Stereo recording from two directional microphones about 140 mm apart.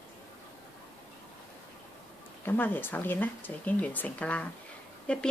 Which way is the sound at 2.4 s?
15° left (ahead or behind).